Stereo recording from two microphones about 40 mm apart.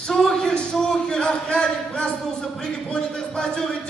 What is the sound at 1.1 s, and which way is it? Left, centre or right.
Speech, left.